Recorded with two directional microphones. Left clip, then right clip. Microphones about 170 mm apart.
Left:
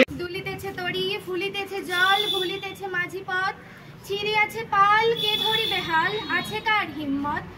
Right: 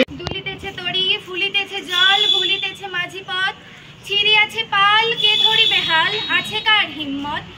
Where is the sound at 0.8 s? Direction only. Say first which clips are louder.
Right 9 dB; 5° left (ahead or behind).